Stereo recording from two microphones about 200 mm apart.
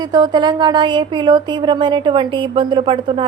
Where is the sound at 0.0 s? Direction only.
20° right (ahead or behind).